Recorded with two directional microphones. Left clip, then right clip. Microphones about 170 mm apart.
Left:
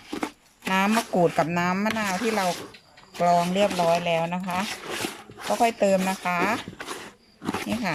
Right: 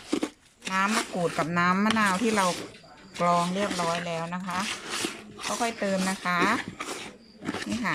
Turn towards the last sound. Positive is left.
turn(degrees=15)  # may be behind; listen again after turning